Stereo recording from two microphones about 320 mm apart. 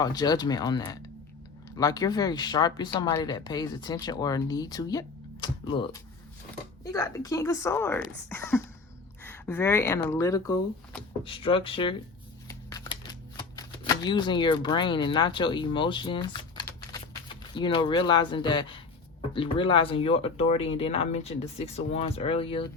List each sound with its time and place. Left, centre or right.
0.0 s speech: centre
12.5 s shuffling cards: centre
17.5 s speech: centre